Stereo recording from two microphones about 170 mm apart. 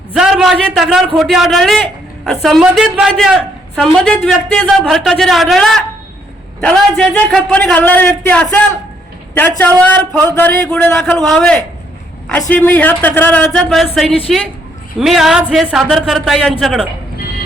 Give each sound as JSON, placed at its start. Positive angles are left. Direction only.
{"t": 0.1, "sound": "a man's voice", "side_deg": -5}